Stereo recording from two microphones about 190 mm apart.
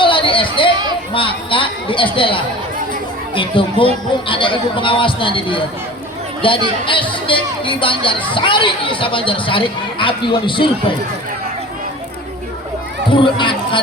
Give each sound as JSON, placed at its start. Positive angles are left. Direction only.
{"t": 0.0, "sound": "chatter", "side_deg": 25}
{"t": 1.1, "sound": "speech", "side_deg": 25}
{"t": 13.1, "sound": "speech", "side_deg": 25}